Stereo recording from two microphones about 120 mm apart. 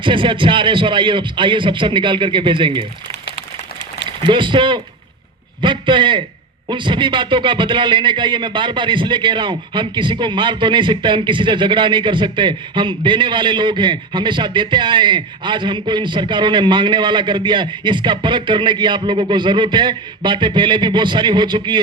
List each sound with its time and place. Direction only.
0.0 s a man's voice: 45° right (ahead or behind)
4.3 s a man's voice: 45° right (ahead or behind)